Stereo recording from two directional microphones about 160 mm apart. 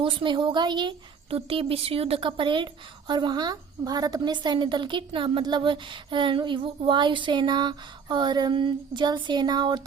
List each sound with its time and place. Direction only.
0.0 s a woman's voice: 30° right (ahead or behind)